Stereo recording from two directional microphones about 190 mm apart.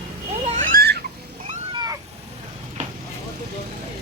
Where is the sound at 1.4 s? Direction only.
25° right (ahead or behind).